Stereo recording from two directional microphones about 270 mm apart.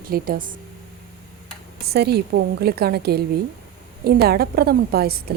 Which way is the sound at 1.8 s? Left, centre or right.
Right.